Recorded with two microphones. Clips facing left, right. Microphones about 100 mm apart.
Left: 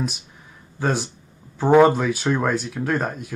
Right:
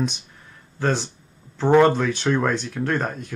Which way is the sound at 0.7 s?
10° left (ahead or behind).